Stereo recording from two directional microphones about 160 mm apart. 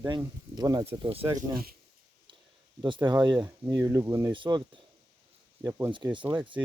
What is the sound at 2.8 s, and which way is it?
Speech, 30° right (ahead or behind).